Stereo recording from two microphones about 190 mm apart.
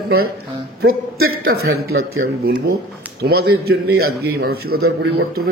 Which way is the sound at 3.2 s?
55° right (ahead or behind).